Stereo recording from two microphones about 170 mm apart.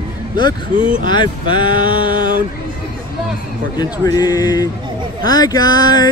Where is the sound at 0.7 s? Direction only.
50° right (ahead or behind).